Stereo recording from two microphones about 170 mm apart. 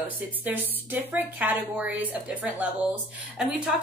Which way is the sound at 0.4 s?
10° right (ahead or behind).